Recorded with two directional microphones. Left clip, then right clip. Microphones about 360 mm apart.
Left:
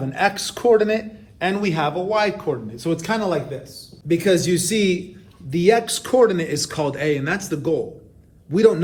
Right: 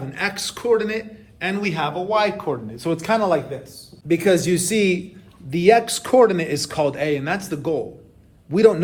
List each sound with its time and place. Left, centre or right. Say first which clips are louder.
0.1 s a man's voice: left 4 dB; centre